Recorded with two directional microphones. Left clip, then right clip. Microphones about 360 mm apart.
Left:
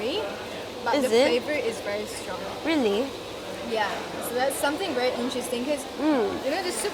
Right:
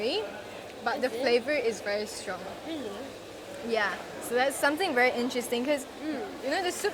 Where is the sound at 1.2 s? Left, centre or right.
Right.